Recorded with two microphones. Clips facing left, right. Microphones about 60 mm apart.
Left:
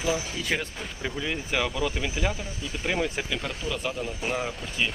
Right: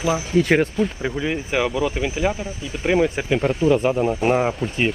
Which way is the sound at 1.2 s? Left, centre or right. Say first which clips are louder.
Right 6 dB; centre.